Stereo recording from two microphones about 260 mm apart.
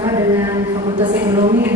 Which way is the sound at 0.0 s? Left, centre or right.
Centre.